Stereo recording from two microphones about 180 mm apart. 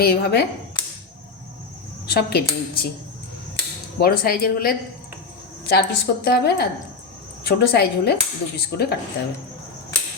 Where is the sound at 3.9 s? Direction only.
55° left (ahead or behind).